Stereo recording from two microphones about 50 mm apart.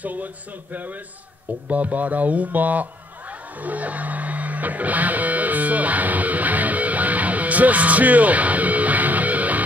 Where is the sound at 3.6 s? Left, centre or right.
Right.